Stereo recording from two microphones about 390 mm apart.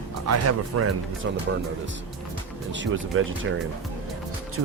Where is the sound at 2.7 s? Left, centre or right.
Right.